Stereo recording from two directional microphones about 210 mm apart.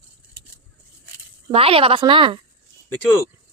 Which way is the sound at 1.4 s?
25° right (ahead or behind).